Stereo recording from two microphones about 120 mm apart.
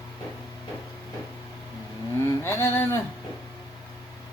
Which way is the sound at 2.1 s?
20° left (ahead or behind).